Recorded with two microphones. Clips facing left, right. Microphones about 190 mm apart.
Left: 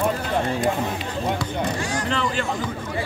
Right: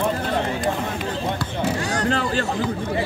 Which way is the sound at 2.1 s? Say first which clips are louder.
Right 2 dB; 40° right (ahead or behind).